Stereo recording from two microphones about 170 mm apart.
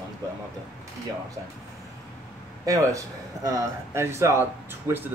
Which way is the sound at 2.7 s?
20° right (ahead or behind).